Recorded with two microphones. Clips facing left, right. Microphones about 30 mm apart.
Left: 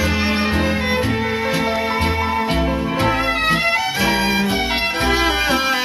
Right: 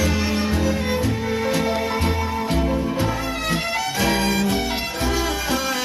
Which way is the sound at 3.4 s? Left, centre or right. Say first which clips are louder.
Left 6 dB; left.